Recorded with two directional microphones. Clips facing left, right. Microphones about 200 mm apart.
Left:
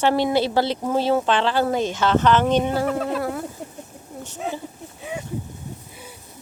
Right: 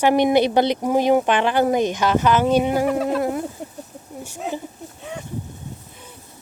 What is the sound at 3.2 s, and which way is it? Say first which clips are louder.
Speech: right 3 dB; 20° right (ahead or behind).